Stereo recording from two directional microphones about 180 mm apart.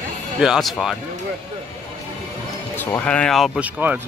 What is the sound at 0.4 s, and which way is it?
Speech, centre (ahead or behind).